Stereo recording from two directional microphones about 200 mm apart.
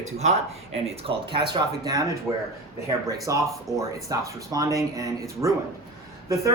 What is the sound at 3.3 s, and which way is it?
A man's voice, 15° right (ahead or behind).